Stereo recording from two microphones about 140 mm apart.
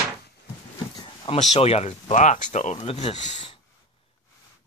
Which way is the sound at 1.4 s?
50° left (ahead or behind).